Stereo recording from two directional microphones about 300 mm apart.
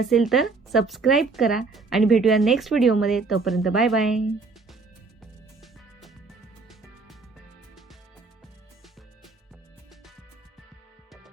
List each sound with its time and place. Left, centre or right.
0.1 s speech: centre